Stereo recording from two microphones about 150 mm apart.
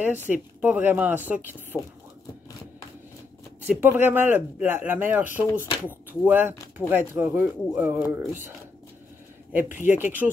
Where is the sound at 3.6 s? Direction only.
10° right (ahead or behind).